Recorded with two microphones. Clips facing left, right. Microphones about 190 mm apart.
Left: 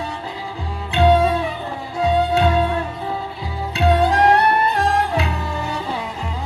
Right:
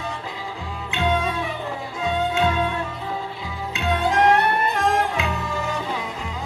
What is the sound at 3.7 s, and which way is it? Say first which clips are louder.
Music: left 5 dB; 35° left (ahead or behind).